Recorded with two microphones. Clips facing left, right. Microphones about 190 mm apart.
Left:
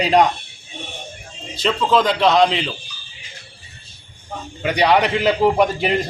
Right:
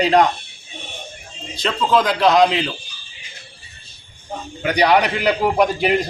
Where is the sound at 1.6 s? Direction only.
Centre (ahead or behind).